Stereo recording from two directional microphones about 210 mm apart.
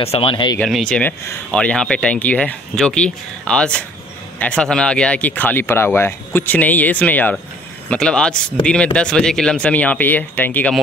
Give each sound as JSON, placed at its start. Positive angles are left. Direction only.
{"t": 0.0, "sound": "speech", "side_deg": 25}
{"t": 0.6, "sound": "speech", "side_deg": 0}